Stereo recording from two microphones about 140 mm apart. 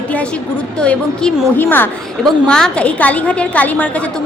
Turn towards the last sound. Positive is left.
turn(degrees=10)  # may be behind; listen again after turning